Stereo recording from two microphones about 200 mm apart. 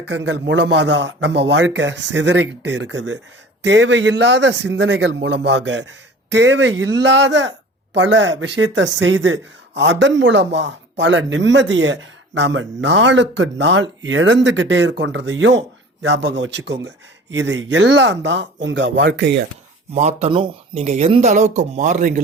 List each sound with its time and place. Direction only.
0.0 s speech: 65° right (ahead or behind)
19.9 s speech: 35° right (ahead or behind)